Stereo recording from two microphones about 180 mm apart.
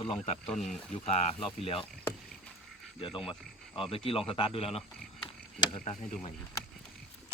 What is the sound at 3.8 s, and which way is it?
Speech, 30° left (ahead or behind).